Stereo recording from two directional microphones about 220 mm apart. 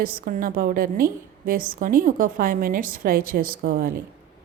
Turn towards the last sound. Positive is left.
turn(degrees=-40)  # may be behind; listen again after turning